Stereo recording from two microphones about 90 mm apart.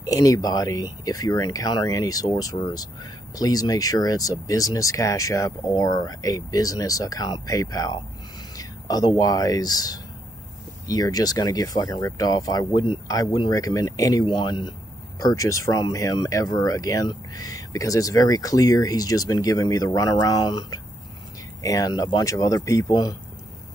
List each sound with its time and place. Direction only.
0.0 s speech: 40° left (ahead or behind)
14.2 s speech: 60° left (ahead or behind)
15.1 s speech: 40° left (ahead or behind)
22.3 s speech: 40° left (ahead or behind)